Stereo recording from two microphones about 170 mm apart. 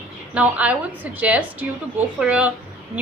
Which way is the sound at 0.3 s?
10° right (ahead or behind).